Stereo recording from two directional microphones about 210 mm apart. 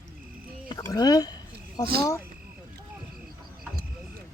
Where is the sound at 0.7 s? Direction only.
15° left (ahead or behind).